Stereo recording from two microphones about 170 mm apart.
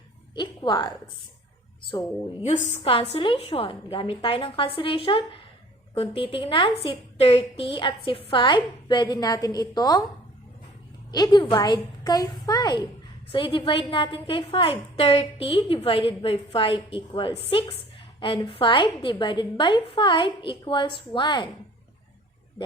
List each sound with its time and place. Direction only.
0.3 s a woman's voice: 25° left (ahead or behind)
2.4 s a woman's voice: 40° left (ahead or behind); by 10.0 s 20° left (ahead or behind)
11.1 s a woman's voice: 25° left (ahead or behind)